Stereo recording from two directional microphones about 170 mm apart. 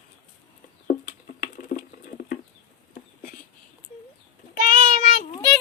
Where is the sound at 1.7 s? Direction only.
50° left (ahead or behind).